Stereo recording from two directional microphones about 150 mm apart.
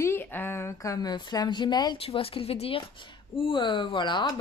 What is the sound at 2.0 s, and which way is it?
Speech, 40° left (ahead or behind).